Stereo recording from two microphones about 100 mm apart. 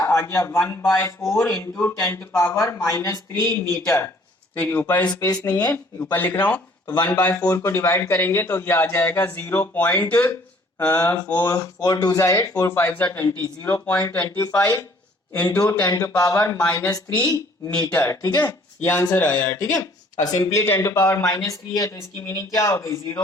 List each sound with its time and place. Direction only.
0.0 s a man's voice: 30° left (ahead or behind)
1.3 s speech: 5° left (ahead or behind)
1.8 s a man's voice: 30° left (ahead or behind)
5.2 s speech: 40° left (ahead or behind)
5.7 s speech: 20° left (ahead or behind)
7.5 s a man's voice: 25° left (ahead or behind)
11.3 s a man's voice: 30° left (ahead or behind); by 14.0 s 15° left (ahead or behind)
14.3 s speech: 35° left (ahead or behind)
16.6 s speech: 15° left (ahead or behind)
17.9 s speech: 30° left (ahead or behind)
18.9 s a man's voice: 20° left (ahead or behind)
19.5 s speech: 35° left (ahead or behind)